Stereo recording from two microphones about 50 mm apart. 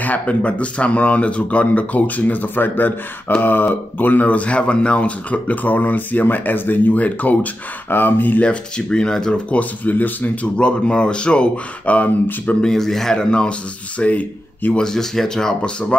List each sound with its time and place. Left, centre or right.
0.0 s speech: left
7.9 s speech: left
8.4 s speech: centre
9.5 s speech: left
10.6 s speech: left
12.6 s speech: centre; by 14.8 s left
14.8 s speech: centre